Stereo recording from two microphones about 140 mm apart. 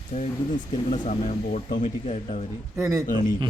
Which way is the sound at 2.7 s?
20° right (ahead or behind).